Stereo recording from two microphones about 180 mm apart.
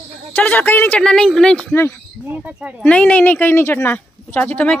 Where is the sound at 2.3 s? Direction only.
10° right (ahead or behind).